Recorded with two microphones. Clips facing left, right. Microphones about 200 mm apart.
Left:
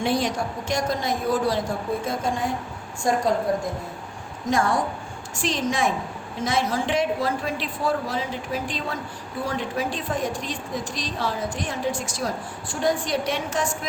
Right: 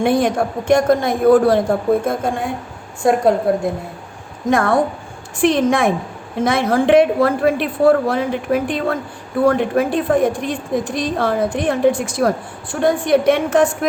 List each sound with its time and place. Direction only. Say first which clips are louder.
0.0 s a woman's voice: right 8 dB; 55° right (ahead or behind)